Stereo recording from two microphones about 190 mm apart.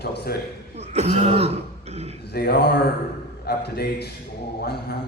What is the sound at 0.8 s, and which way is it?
Throat clearing, 35° right (ahead or behind).